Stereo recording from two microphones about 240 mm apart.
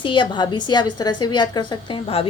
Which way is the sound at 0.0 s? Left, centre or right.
Centre.